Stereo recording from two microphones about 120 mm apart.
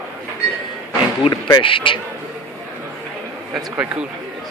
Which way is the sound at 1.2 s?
50° left (ahead or behind).